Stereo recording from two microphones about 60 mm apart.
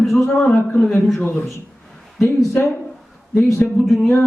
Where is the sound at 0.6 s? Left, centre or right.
Left.